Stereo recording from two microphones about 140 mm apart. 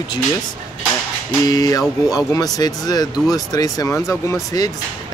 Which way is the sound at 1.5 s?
25° left (ahead or behind).